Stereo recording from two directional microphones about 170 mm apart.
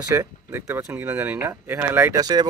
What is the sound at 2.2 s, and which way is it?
Speech, 25° right (ahead or behind).